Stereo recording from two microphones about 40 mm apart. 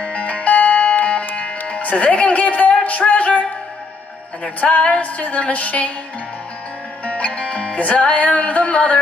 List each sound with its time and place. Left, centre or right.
0.0 s music: left
2.0 s a woman's voice: left
4.6 s a woman's voice: left
5.0 s a woman's voice: left
7.1 s music: left